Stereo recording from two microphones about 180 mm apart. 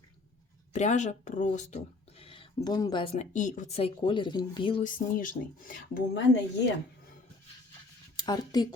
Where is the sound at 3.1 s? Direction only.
45° left (ahead or behind); by 4.8 s 30° left (ahead or behind).